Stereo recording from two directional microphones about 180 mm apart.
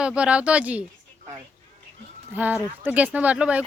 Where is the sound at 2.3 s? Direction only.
10° right (ahead or behind).